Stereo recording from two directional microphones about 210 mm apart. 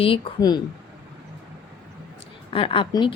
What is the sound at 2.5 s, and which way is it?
Speech, 25° left (ahead or behind).